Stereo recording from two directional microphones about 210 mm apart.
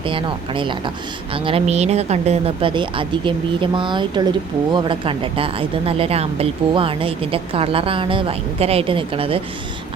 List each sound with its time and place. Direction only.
0.0 s speech: 25° right (ahead or behind)